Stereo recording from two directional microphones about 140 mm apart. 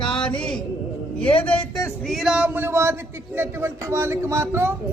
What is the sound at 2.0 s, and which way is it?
Speech, centre (ahead or behind).